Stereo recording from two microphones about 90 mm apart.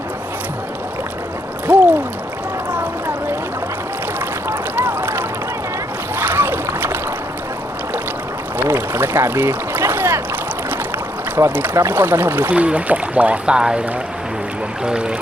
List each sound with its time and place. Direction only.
1.6 s a sound: 20° right (ahead or behind)
2.7 s boat: 20° right (ahead or behind)
4.4 s a sound: 25° right (ahead or behind)
6.1 s rowboat: 25° right (ahead or behind)
8.5 s boat: 25° right (ahead or behind)
11.3 s speech: 25° right (ahead or behind)
14.8 s speech: 10° right (ahead or behind)